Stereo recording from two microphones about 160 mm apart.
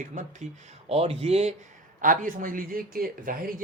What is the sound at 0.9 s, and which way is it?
Speech, 40° right (ahead or behind).